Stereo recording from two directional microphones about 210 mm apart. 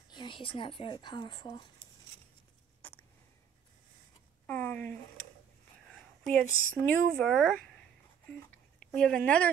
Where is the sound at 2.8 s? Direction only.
10° left (ahead or behind).